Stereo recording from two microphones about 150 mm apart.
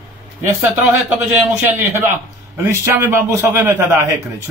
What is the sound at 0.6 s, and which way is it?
A man's voice, 15° right (ahead or behind).